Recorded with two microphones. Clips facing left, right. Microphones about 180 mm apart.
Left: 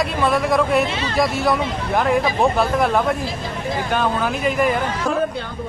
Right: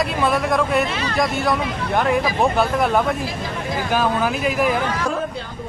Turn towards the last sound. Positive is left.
turn(degrees=0)  # may be behind; listen again after turning